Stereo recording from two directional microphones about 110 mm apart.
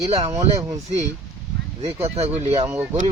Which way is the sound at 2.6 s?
25° right (ahead or behind).